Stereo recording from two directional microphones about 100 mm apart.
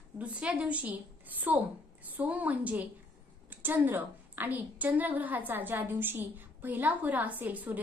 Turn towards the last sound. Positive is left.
turn(degrees=-15)  # may be behind; listen again after turning